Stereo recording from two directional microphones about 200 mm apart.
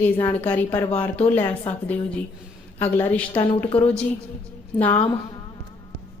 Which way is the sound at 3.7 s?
5° left (ahead or behind).